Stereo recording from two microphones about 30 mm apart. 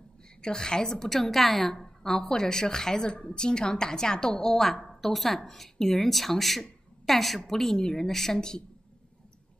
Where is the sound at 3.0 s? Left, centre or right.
Left.